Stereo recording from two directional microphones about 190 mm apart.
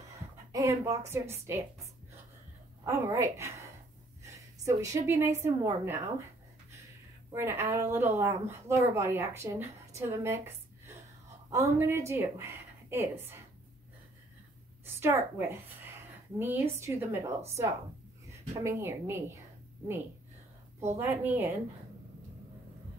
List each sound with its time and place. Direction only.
0.5 s a woman's voice: 15° right (ahead or behind)
2.8 s a woman's voice: 15° right (ahead or behind)
7.3 s a woman's voice: 10° right (ahead or behind)
11.5 s a woman's voice: 15° right (ahead or behind)
15.0 s a woman's voice: 10° right (ahead or behind)
18.6 s a woman's voice: 15° right (ahead or behind)
20.9 s a woman's voice: 10° right (ahead or behind)